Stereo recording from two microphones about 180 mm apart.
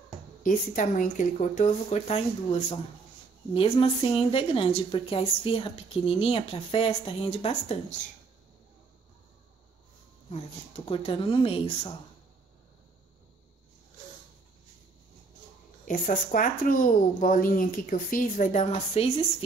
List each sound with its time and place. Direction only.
0.4 s a woman's voice: 50° left (ahead or behind)
10.9 s a woman's voice: 30° left (ahead or behind)
15.8 s speech: 50° left (ahead or behind)